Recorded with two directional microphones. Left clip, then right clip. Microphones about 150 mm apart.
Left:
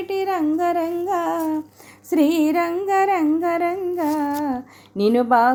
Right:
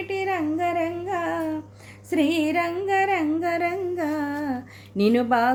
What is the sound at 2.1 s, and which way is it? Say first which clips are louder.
Music: left 4 dB; 45° left (ahead or behind).